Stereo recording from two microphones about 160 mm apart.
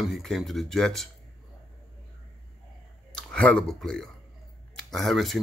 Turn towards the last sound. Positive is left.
turn(degrees=0)  # may be behind; listen again after turning